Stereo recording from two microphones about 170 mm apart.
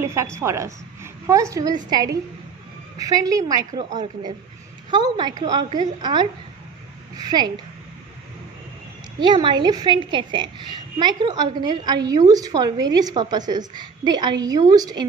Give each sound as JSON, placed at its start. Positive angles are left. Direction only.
{"t": 0.0, "sound": "a woman's voice", "side_deg": -15}
{"t": 9.2, "sound": "a woman's voice", "side_deg": -25}